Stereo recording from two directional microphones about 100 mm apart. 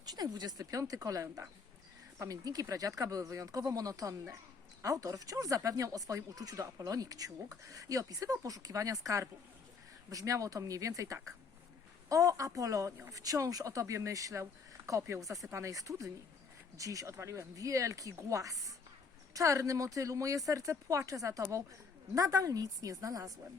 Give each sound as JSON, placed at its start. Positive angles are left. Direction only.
{"t": 0.0, "sound": "speech", "side_deg": -40}